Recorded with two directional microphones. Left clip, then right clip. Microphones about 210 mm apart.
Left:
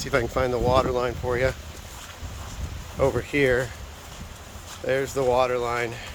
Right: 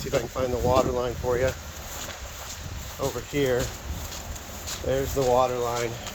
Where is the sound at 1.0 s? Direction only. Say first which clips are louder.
Left 1 dB; 20° left (ahead or behind).